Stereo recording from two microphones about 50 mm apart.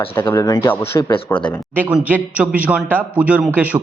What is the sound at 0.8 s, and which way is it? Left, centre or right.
Speech, left.